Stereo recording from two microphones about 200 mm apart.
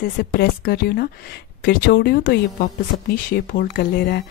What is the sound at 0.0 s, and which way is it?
Speech, 50° left (ahead or behind).